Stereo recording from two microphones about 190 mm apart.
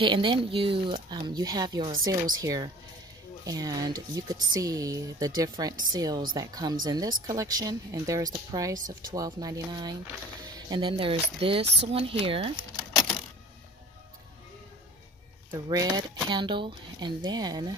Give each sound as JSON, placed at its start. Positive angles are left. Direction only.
{"t": 0.0, "sound": "speech", "side_deg": -25}
{"t": 15.5, "sound": "speech", "side_deg": -20}